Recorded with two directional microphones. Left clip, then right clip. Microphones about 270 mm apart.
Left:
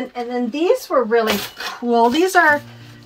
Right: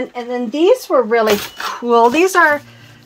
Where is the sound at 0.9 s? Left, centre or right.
Right.